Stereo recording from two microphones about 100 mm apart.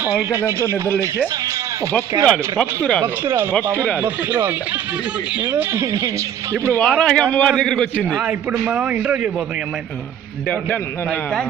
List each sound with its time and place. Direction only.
0.0 s speech: 15° right (ahead or behind)
2.2 s a man's voice: 10° left (ahead or behind)
3.2 s a man's voice: 25° right (ahead or behind)
5.8 s speech: 30° right (ahead or behind)
6.7 s a man's voice: 15° left (ahead or behind)
8.2 s a man's voice: 10° right (ahead or behind)
10.5 s a man's voice: 15° left (ahead or behind)